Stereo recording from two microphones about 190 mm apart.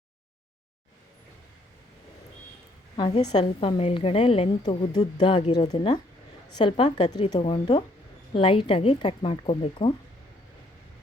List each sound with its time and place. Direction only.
3.3 s a woman's voice: 30° left (ahead or behind)